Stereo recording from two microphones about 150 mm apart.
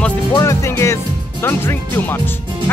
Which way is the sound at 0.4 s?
20° left (ahead or behind).